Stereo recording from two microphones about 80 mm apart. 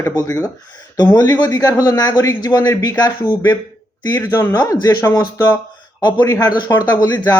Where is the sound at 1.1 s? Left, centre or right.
Left.